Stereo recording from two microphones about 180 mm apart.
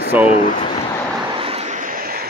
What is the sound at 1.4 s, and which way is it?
Vehicle, 35° right (ahead or behind).